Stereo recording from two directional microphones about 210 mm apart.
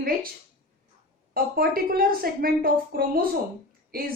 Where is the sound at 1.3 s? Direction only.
45° right (ahead or behind).